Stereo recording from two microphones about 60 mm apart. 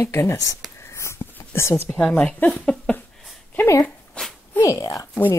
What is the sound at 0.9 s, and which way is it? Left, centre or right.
Whispering, left.